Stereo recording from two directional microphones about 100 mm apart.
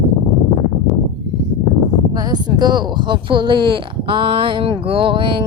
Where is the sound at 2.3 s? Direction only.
45° right (ahead or behind).